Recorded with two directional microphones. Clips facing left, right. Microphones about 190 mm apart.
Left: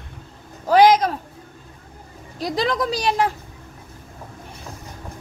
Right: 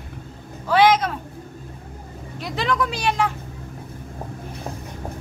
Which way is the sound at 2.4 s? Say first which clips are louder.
Left 2 dB; 35° left (ahead or behind).